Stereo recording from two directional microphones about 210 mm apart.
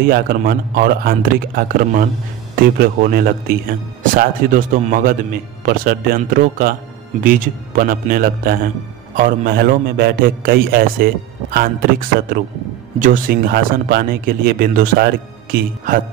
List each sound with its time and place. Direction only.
0.0 s a man's voice: 45° right (ahead or behind)
12.1 s a man's voice: 45° right (ahead or behind)